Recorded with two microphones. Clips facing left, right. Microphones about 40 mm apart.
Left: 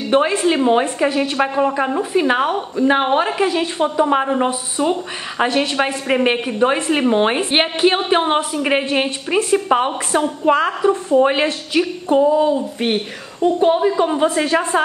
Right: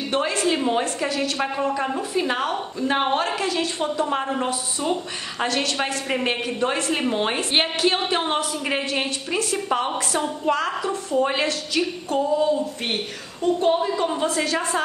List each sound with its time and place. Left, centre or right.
0.1 s a woman's voice: left